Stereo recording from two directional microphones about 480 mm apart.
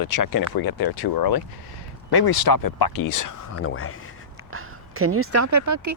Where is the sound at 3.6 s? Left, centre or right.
Left.